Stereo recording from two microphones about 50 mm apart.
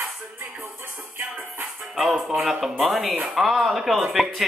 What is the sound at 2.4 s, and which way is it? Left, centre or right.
Speech, centre.